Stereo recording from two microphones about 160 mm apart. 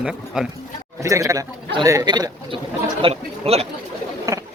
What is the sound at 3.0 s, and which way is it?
Speech, 40° right (ahead or behind).